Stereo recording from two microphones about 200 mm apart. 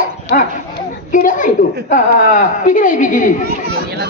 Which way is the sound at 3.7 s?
50° right (ahead or behind).